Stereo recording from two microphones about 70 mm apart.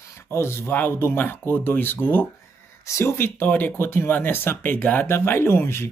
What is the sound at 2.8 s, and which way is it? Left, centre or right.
Speech, left.